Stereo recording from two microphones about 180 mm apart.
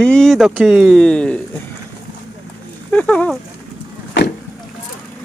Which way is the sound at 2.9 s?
5° left (ahead or behind).